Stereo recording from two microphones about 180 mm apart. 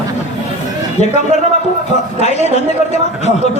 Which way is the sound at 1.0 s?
40° left (ahead or behind).